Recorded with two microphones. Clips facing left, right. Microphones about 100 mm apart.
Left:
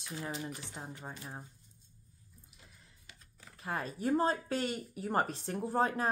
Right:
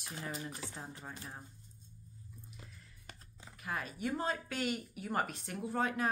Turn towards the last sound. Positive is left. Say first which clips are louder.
# left 4 dB
turn(degrees=35)  # may be behind; listen again after turning